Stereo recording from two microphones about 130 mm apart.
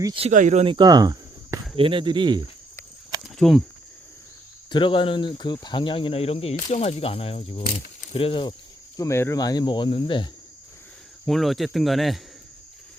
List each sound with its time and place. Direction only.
0.2 s speech: 65° right (ahead or behind)
0.6 s speech: 40° right (ahead or behind)
0.9 s cricket: 30° right (ahead or behind)
1.7 s speech: 40° right (ahead or behind)
3.2 s speech: centre (ahead or behind)
4.7 s speech: 40° left (ahead or behind)
9.0 s speech: 20° left (ahead or behind); by 10.2 s 40° left (ahead or behind)
11.3 s speech: centre (ahead or behind)